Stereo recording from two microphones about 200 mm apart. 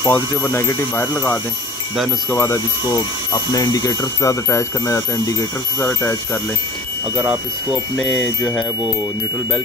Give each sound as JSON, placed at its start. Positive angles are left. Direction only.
{"t": 0.0, "sound": "speech", "side_deg": 10}
{"t": 7.2, "sound": "speech", "side_deg": 0}